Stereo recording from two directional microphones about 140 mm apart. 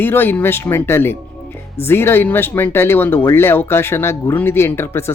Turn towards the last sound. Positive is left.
turn(degrees=15)  # may be behind; listen again after turning